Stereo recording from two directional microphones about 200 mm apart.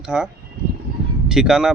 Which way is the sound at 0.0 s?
5° right (ahead or behind).